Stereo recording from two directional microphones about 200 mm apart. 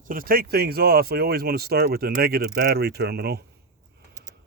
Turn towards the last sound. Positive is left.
turn(degrees=-50)  # may be behind; listen again after turning